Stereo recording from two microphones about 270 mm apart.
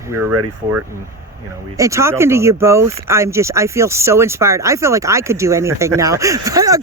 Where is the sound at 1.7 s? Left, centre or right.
Centre.